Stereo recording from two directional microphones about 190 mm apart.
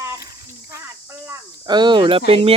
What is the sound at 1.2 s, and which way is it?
Speech, 20° right (ahead or behind).